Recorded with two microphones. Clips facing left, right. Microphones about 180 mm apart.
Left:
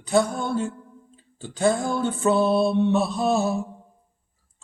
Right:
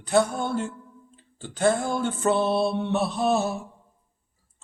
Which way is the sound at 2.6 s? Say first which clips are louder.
Left 4 dB; centre (ahead or behind).